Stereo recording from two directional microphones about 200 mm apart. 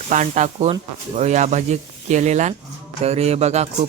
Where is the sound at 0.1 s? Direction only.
35° right (ahead or behind).